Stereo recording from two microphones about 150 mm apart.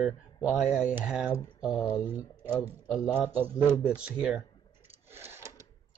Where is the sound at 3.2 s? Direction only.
10° right (ahead or behind).